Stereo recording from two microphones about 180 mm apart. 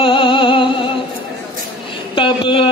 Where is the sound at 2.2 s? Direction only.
30° left (ahead or behind).